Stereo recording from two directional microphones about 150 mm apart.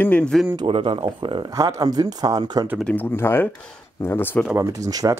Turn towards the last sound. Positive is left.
turn(degrees=-25)  # may be behind; listen again after turning